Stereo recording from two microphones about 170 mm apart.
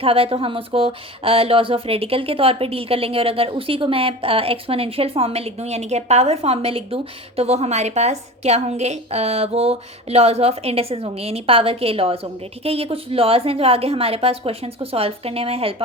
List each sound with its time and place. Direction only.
0.0 s speech: 35° right (ahead or behind)